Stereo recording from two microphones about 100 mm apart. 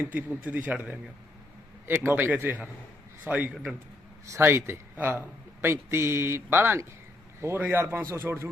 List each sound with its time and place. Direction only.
0.0 s a man's voice: 20° right (ahead or behind)